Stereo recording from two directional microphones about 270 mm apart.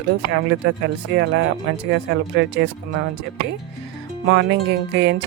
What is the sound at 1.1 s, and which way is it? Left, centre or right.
A woman's voice, right.